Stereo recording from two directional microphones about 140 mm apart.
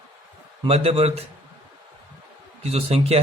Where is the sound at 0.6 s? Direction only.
40° right (ahead or behind).